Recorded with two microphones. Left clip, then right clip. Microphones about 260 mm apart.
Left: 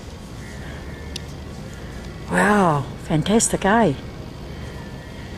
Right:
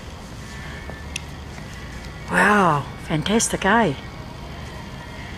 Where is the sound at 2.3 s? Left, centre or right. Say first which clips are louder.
Right 1 dB; centre.